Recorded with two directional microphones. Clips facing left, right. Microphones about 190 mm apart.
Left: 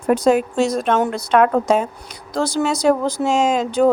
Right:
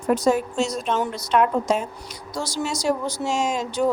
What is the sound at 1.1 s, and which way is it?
Speech, 70° left (ahead or behind).